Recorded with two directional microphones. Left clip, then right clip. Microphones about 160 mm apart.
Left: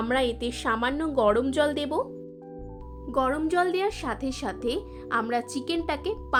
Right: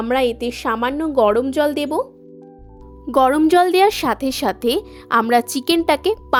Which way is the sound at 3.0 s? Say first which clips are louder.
Right 11 dB; 90° right.